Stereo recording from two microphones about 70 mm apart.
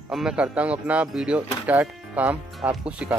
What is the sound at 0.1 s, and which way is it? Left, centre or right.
Speech, centre.